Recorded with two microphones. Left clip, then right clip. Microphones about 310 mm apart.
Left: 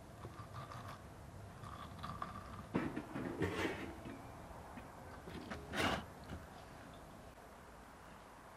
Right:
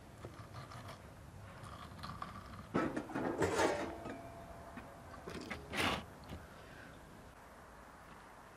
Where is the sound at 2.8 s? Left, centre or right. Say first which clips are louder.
Right 6 dB; centre.